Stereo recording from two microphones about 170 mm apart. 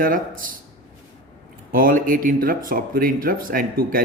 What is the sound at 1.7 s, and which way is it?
Speech, 55° right (ahead or behind).